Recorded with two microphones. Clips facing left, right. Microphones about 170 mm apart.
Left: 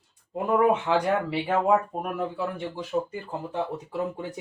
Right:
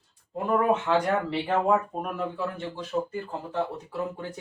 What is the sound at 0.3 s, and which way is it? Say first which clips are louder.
Speech: left 2 dB; 15° left (ahead or behind).